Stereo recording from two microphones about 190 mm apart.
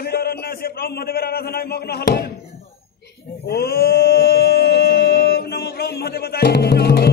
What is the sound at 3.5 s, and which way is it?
Chant, 55° left (ahead or behind).